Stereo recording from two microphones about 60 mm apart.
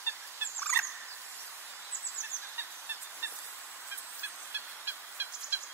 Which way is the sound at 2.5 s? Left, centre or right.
Right.